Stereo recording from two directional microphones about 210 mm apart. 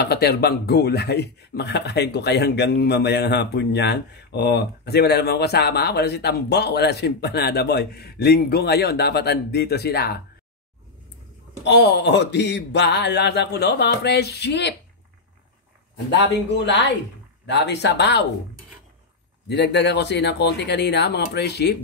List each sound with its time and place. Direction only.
0.1 s a man's voice: 50° left (ahead or behind)
11.6 s a man's voice: 55° left (ahead or behind)
16.1 s speech: 55° left (ahead or behind)
19.4 s a man's voice: 55° left (ahead or behind)